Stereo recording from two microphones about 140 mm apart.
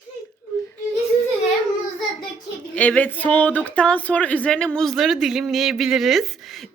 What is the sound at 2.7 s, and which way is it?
Speech, 10° left (ahead or behind).